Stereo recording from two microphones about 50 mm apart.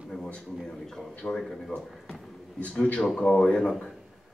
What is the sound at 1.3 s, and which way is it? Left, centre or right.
A man's voice, centre.